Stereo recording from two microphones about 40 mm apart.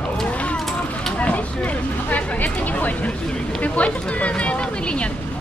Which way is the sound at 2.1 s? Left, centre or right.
Left.